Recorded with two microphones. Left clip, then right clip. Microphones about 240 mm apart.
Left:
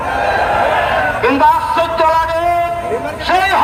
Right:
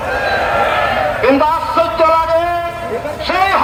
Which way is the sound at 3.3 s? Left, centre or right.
Left.